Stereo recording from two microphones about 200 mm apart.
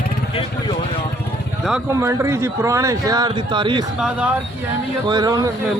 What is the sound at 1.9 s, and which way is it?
Speech, 15° right (ahead or behind).